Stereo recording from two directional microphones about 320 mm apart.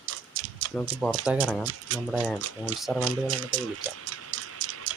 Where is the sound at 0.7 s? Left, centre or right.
Centre.